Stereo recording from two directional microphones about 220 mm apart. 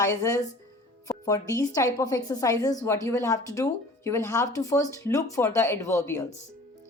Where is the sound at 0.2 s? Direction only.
15° left (ahead or behind).